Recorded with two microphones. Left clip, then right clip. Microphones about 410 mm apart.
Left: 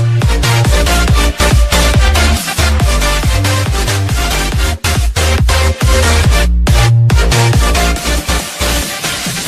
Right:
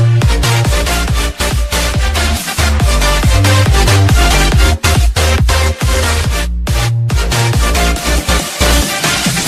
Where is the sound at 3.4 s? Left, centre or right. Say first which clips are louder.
Right 3 dB; right.